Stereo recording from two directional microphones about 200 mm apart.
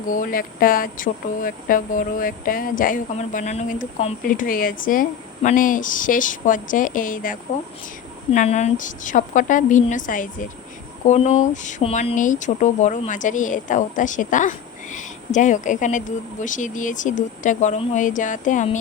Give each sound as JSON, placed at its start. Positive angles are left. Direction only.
{"t": 0.1, "sound": "speech", "side_deg": 45}